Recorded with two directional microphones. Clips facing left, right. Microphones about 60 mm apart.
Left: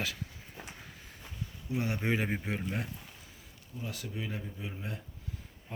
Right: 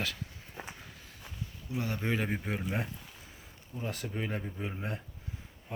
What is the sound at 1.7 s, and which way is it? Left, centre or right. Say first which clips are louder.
Speech: left 1 dB; centre.